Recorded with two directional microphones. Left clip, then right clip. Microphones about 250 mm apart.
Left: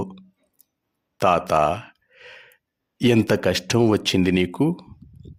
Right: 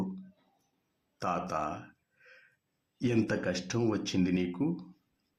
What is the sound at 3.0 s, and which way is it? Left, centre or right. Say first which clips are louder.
Speech: left 12 dB; left.